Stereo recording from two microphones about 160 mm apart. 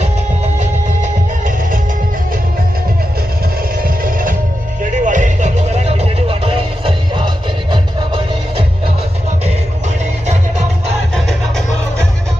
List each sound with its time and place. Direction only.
3.8 s music: 60° right (ahead or behind); by 8.6 s 30° right (ahead or behind)
11.1 s music: 5° left (ahead or behind)